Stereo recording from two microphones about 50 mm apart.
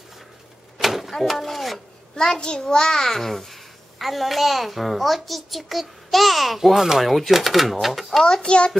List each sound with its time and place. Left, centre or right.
0.7 s a sound: centre
1.2 s speech: centre
2.1 s a child's voice: centre
8.3 s a child's voice: centre